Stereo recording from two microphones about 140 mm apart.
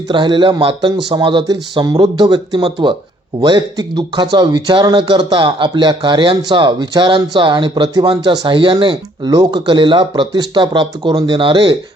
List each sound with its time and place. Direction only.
0.1 s speech: 35° right (ahead or behind)